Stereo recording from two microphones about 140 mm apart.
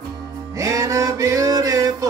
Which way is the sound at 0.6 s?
25° right (ahead or behind).